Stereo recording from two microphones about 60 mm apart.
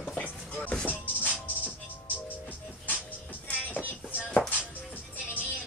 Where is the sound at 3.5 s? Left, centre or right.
Left.